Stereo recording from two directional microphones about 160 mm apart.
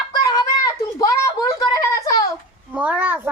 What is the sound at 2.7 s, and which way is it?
Speech, 10° right (ahead or behind).